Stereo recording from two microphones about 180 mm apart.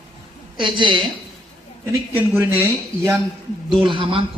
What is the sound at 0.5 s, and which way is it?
Speech, 25° right (ahead or behind).